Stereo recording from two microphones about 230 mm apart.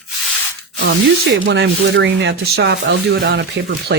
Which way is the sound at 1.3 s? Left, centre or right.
Right.